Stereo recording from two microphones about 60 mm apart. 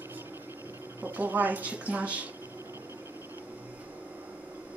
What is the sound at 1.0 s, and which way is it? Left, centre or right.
Speech, right.